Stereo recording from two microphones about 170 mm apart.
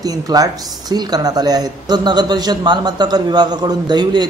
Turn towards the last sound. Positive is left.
turn(degrees=-25)  # may be behind; listen again after turning